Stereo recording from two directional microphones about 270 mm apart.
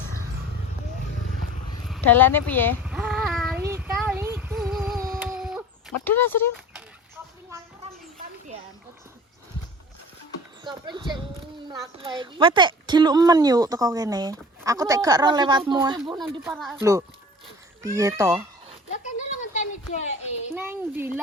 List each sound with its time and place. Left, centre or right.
1.9 s speech: centre
2.8 s child singing: centre
5.1 s a sound: centre
6.1 s speech: centre
10.6 s speech: centre
16.1 s speech: centre
17.8 s speech: centre
18.9 s speech: left
20.5 s speech: centre